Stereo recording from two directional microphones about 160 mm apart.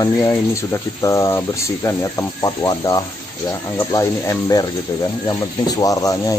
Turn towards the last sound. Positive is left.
turn(degrees=20)  # may be behind; listen again after turning